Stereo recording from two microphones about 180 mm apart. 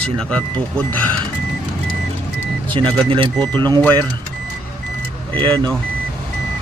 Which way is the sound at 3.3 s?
5° left (ahead or behind).